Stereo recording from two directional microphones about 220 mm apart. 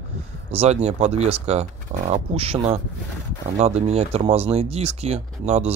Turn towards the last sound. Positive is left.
turn(degrees=-30)  # may be behind; listen again after turning